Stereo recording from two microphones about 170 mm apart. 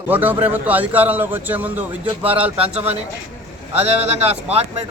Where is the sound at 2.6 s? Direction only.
35° right (ahead or behind).